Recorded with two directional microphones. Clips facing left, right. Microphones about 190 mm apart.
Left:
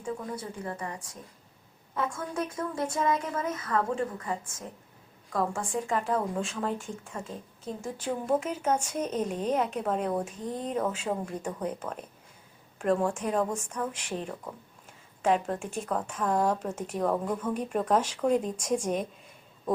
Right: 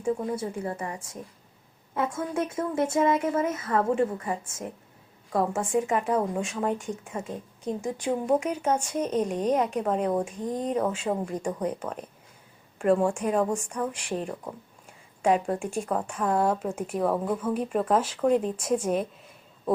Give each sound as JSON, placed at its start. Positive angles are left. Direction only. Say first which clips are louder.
{"t": 0.0, "sound": "speech", "louder": "right 7 dB", "side_deg": -25}
{"t": 5.8, "sound": "speech", "louder": "right 3 dB", "side_deg": -5}
{"t": 6.1, "sound": "speech", "louder": "right 3 dB", "side_deg": -20}
{"t": 10.5, "sound": "speech", "louder": "right 5 dB", "side_deg": -35}
{"t": 11.0, "sound": "speech", "louder": "right 4 dB", "side_deg": -10}